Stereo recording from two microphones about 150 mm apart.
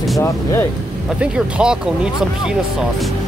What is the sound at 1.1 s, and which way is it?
Speech, 5° right (ahead or behind).